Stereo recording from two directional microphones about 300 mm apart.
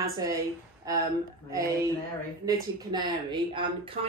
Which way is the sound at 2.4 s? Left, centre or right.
Centre.